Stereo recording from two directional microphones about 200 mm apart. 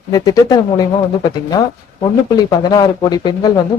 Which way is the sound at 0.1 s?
20° left (ahead or behind).